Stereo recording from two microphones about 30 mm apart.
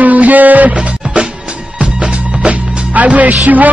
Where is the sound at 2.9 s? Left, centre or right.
Right.